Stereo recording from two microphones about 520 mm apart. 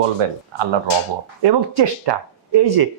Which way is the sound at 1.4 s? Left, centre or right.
Right.